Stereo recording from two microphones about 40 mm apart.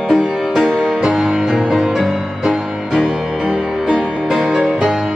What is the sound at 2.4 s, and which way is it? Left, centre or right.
Music, centre.